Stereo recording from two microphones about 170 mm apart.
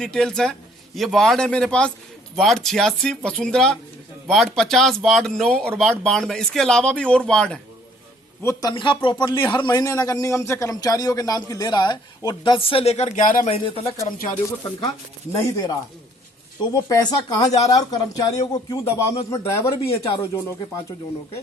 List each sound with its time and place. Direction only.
0.0 s speech: 5° left (ahead or behind)
8.4 s speech: 15° left (ahead or behind)
8.7 s a man's voice: 30° left (ahead or behind)
13.7 s speech: 35° left (ahead or behind)
14.8 s a man's voice: 20° left (ahead or behind)
16.7 s a man's voice: 25° left (ahead or behind)